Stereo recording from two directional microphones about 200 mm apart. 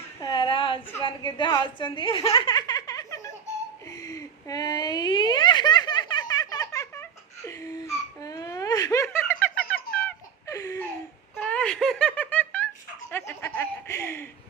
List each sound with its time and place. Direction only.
0.2 s a sound: 20° left (ahead or behind)
1.0 s speech: 25° left (ahead or behind)
3.8 s giggle: 15° left (ahead or behind)
11.3 s giggle: 5° left (ahead or behind)
13.1 s chuckle: 10° left (ahead or behind)